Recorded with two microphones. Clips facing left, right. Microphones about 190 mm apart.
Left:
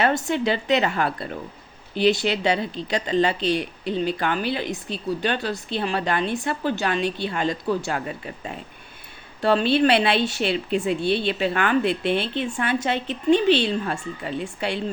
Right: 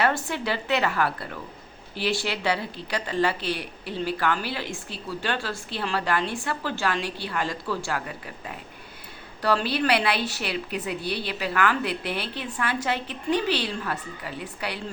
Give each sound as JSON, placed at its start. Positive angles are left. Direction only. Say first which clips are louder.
{"t": 0.0, "sound": "speech", "louder": "left 4 dB", "side_deg": 25}